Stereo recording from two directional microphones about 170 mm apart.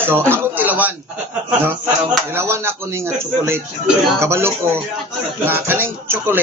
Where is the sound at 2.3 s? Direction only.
15° right (ahead or behind).